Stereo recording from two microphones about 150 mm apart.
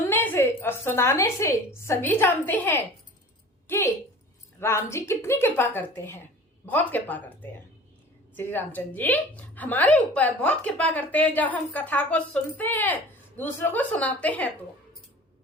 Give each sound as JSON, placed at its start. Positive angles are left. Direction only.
{"t": 0.0, "sound": "a woman's voice", "side_deg": 15}
{"t": 8.4, "sound": "a woman's voice", "side_deg": 15}